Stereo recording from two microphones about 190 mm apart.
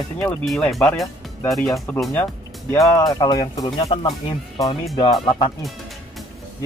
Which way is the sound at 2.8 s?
15° left (ahead or behind).